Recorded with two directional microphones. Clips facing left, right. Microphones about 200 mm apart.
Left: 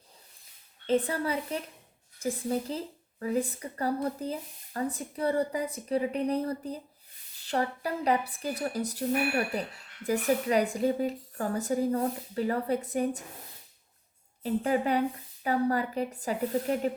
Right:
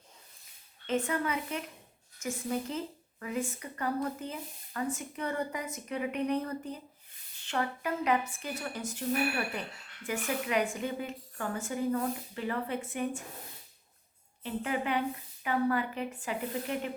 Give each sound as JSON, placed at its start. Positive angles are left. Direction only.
{"t": 0.9, "sound": "a woman's voice", "side_deg": 35}
{"t": 10.1, "sound": "a woman's voice", "side_deg": 35}
{"t": 14.4, "sound": "a woman's voice", "side_deg": 40}